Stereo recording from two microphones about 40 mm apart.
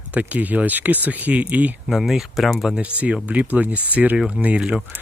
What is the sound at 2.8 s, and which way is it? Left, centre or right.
Speech, right.